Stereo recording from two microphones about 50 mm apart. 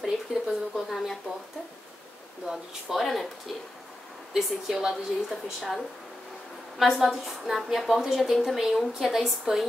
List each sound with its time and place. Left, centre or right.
0.0 s speech: centre
2.9 s speech: centre
4.3 s a woman's voice: centre